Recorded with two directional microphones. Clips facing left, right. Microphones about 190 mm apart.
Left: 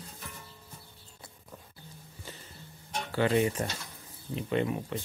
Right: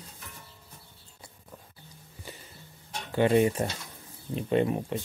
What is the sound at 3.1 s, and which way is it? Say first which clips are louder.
Speech: right 4 dB; 20° right (ahead or behind).